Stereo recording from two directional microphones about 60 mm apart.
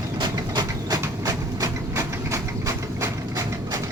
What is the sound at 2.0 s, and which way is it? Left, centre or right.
Engine, right.